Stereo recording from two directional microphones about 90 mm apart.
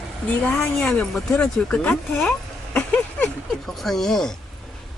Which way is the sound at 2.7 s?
20° left (ahead or behind).